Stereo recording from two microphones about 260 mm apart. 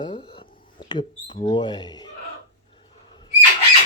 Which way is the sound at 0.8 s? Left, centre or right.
Centre.